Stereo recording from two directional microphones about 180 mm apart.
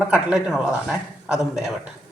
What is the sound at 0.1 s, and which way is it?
A man's voice, 5° right (ahead or behind).